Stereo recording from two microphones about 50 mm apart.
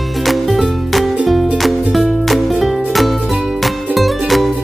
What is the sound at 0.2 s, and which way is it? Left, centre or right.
Music, centre.